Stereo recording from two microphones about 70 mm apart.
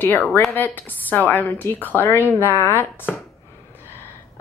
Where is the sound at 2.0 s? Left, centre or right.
Left.